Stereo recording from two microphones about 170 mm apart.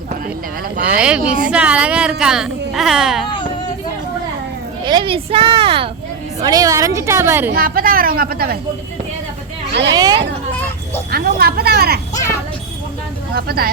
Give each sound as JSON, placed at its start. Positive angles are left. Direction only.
{"t": 0.9, "sound": "a woman's voice", "side_deg": -5}
{"t": 3.2, "sound": "a sound", "side_deg": 30}
{"t": 4.9, "sound": "a woman's voice", "side_deg": -30}
{"t": 6.4, "sound": "a woman's voice", "side_deg": -20}
{"t": 7.5, "sound": "speech", "side_deg": -60}
{"t": 9.9, "sound": "speech", "side_deg": -25}
{"t": 11.1, "sound": "speech", "side_deg": -65}
{"t": 13.3, "sound": "speech", "side_deg": -65}